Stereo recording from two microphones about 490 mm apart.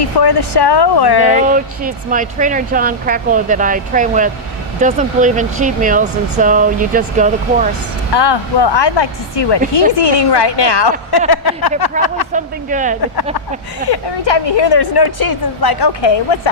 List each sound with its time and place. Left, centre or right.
0.2 s speech: left
1.5 s speech: centre
8.1 s a woman's voice: left
12.3 s speech: centre
13.9 s a woman's voice: left